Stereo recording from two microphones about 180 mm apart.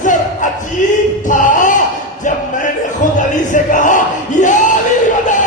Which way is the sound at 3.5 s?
45° left (ahead or behind).